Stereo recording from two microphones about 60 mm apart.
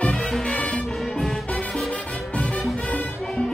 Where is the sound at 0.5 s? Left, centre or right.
Centre.